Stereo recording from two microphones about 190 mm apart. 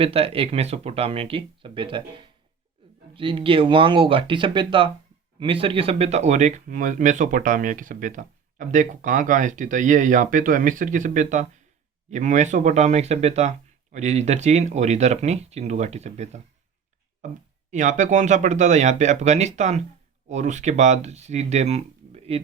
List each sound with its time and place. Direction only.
0.0 s speech: 30° right (ahead or behind)
17.7 s speech: 40° right (ahead or behind)